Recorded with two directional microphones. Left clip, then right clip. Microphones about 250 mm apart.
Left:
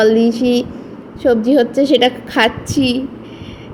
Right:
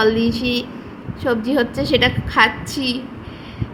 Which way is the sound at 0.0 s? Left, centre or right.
Centre.